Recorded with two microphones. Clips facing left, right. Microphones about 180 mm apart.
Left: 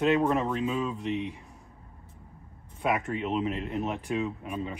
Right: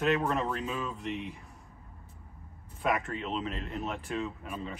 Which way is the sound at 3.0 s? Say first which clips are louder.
Left 6 dB; 10° left (ahead or behind).